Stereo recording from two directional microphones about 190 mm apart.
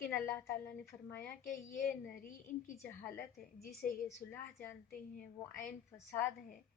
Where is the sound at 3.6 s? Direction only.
55° left (ahead or behind).